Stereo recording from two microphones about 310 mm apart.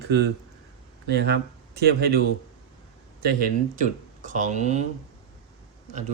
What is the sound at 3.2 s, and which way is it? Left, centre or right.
Speech, right.